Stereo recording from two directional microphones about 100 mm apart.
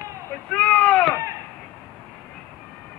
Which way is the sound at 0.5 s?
10° left (ahead or behind).